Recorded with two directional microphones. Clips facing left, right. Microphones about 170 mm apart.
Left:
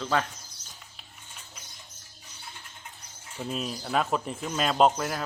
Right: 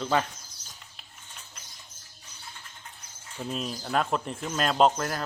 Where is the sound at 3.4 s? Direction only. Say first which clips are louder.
Even; centre (ahead or behind).